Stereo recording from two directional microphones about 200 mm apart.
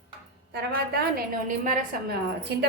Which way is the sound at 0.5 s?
50° right (ahead or behind).